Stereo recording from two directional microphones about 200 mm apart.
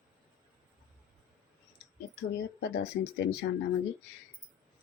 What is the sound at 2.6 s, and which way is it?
Speech, 60° left (ahead or behind).